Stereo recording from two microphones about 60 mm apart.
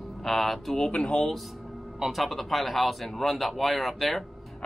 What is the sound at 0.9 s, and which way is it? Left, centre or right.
Speech, centre.